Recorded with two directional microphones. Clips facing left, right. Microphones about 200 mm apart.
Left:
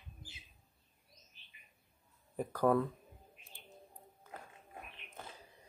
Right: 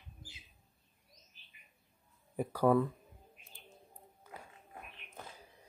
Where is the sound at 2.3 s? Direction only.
10° right (ahead or behind).